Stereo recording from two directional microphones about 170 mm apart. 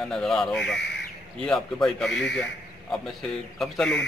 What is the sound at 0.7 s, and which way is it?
Speech, 90° left.